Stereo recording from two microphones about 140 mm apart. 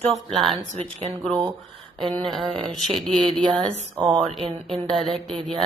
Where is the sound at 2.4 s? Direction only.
40° right (ahead or behind).